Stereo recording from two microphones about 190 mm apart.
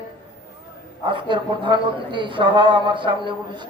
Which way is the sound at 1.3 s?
25° right (ahead or behind).